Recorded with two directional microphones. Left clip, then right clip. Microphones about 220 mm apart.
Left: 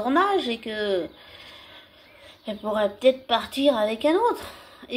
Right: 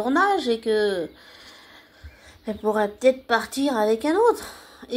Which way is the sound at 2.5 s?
35° right (ahead or behind).